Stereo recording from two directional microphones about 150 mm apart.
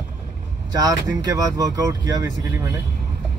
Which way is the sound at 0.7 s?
25° right (ahead or behind).